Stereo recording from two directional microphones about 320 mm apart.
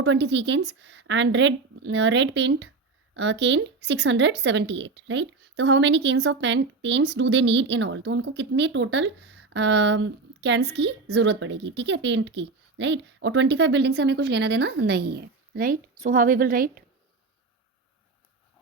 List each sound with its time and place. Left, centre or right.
0.0 s speech: right